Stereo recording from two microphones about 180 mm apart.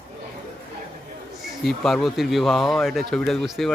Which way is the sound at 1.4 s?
Centre (ahead or behind).